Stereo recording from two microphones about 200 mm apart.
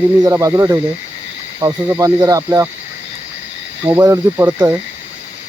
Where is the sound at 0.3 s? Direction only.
15° right (ahead or behind).